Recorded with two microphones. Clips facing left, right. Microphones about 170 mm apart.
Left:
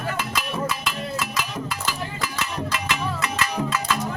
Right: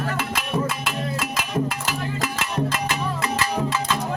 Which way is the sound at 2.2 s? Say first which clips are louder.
Right 4 dB; 50° right (ahead or behind).